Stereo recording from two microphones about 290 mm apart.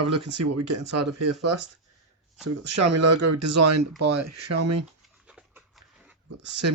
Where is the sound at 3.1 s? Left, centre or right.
Right.